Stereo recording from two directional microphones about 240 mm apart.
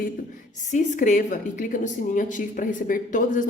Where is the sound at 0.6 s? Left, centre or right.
Left.